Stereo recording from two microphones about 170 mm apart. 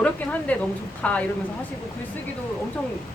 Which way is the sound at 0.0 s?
10° left (ahead or behind).